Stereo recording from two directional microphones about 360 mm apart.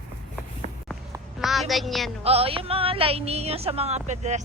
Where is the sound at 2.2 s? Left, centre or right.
Centre.